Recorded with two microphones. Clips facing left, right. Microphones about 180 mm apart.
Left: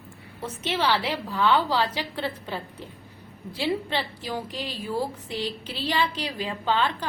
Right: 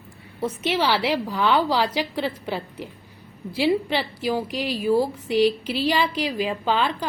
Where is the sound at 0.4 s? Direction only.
10° right (ahead or behind).